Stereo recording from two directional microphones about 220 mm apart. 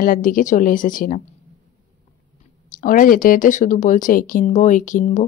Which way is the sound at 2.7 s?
35° left (ahead or behind).